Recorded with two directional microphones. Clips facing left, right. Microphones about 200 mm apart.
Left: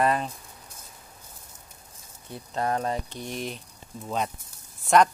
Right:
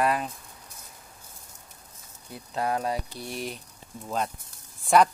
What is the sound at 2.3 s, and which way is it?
Speech, 5° right (ahead or behind).